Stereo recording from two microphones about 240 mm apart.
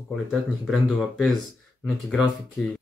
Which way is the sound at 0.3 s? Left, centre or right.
Centre.